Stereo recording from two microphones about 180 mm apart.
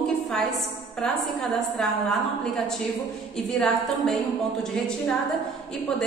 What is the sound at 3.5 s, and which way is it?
A man's voice, 5° left (ahead or behind).